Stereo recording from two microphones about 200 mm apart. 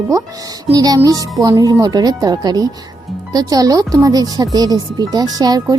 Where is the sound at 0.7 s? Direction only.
20° right (ahead or behind).